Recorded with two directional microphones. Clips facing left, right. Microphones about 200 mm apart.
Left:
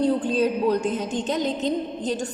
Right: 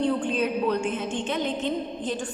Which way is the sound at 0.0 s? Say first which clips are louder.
Left 4 dB; 35° left (ahead or behind).